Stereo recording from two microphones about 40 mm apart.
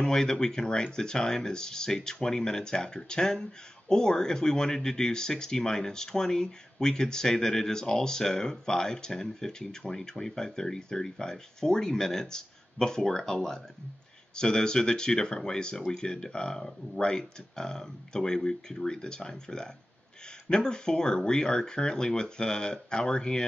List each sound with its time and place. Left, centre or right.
0.0 s speech: centre